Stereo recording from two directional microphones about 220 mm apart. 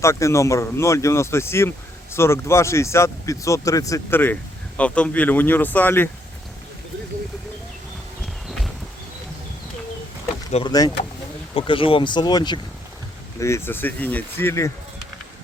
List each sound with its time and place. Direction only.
0.0 s speech: 15° left (ahead or behind)
10.5 s speech: 20° left (ahead or behind)